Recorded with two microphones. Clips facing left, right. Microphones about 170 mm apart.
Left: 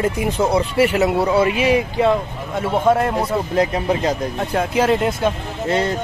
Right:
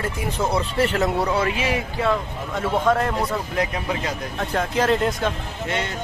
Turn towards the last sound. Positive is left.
turn(degrees=35)  # may be behind; listen again after turning